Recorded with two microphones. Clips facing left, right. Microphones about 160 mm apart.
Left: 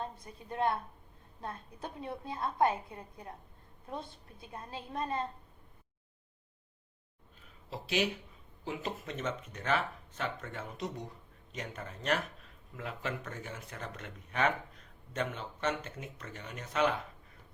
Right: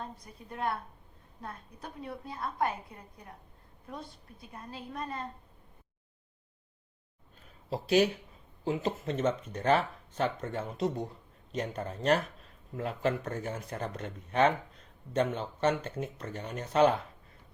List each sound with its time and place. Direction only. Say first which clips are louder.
0.0 s a woman's voice: left 2 dB; 25° left (ahead or behind)
3.8 s a woman's voice: left 1 dB; 25° left (ahead or behind)
7.7 s speech: right 8 dB; 40° right (ahead or behind)
8.6 s speech: right 7 dB; 30° right (ahead or behind)